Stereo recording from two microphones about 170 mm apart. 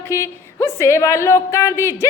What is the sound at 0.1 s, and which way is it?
A woman's voice, 15° left (ahead or behind).